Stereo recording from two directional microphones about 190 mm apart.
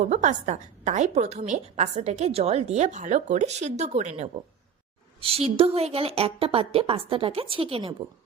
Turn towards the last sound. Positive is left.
turn(degrees=-30)  # may be behind; listen again after turning